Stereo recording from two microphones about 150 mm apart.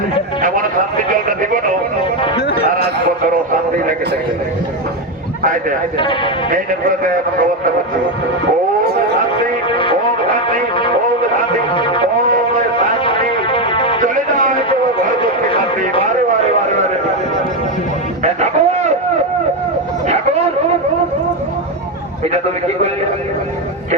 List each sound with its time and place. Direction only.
6.0 s speech: 35° left (ahead or behind)
9.6 s music: 35° left (ahead or behind)
11.7 s music: 35° left (ahead or behind)
13.1 s music: 35° left (ahead or behind)
14.0 s music: 65° right (ahead or behind)
15.2 s music: 35° left (ahead or behind)
18.2 s music: 50° right (ahead or behind)